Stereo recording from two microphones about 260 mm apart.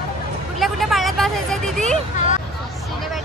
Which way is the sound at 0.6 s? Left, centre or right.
Centre.